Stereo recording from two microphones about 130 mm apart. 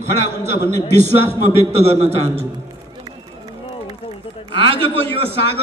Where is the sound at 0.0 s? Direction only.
60° right (ahead or behind).